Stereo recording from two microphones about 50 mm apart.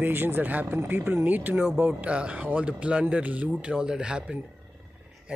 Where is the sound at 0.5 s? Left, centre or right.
Right.